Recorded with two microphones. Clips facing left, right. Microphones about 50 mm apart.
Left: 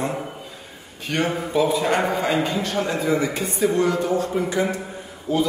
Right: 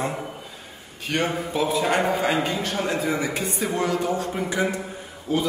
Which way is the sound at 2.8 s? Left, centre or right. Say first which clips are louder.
Left 3 dB; centre.